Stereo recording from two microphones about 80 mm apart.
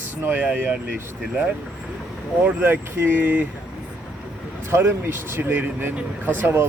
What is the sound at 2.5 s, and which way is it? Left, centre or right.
Speech, right.